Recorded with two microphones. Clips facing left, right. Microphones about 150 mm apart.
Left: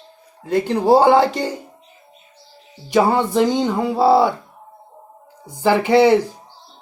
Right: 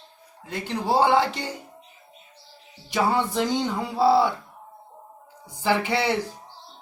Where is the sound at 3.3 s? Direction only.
70° left (ahead or behind).